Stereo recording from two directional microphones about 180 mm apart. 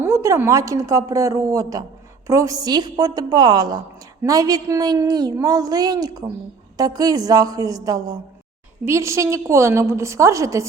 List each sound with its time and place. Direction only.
0.0 s a woman's voice: 15° right (ahead or behind)